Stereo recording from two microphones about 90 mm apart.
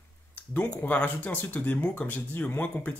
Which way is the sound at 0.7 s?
20° left (ahead or behind).